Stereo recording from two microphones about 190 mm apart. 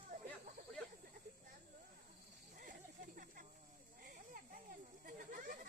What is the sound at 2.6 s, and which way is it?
Snake, 45° right (ahead or behind).